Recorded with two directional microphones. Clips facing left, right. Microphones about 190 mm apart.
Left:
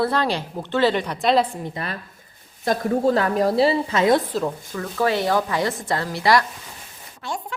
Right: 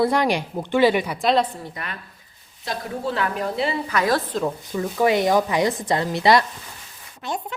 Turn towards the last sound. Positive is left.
turn(degrees=-20)  # may be behind; listen again after turning